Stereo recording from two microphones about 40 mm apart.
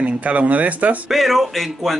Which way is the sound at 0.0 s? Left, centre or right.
Right.